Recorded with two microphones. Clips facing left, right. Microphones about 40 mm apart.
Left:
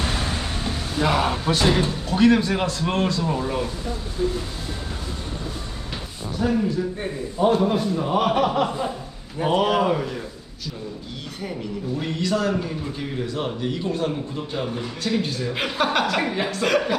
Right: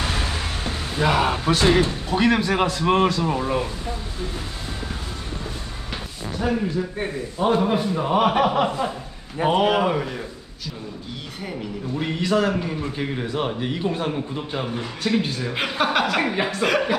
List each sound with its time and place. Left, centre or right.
0.9 s a man's voice: centre
6.4 s a man's voice: centre
11.9 s a man's voice: centre